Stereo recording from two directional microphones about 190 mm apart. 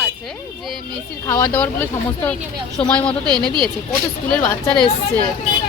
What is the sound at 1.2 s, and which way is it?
A woman's voice, 15° left (ahead or behind).